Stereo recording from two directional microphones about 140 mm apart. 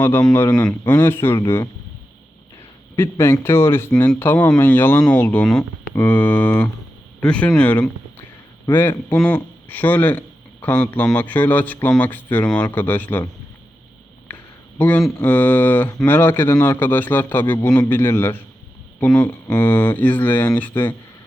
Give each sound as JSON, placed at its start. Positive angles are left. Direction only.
{"t": 0.3, "sound": "speech", "side_deg": 10}
{"t": 2.9, "sound": "a man's voice", "side_deg": 20}
{"t": 14.3, "sound": "a sound", "side_deg": 10}
{"t": 14.8, "sound": "speech", "side_deg": 10}